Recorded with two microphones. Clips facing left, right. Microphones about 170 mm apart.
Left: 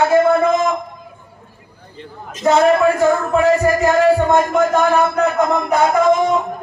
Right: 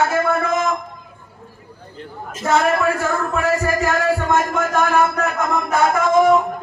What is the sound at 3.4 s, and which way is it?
Speech, 20° left (ahead or behind).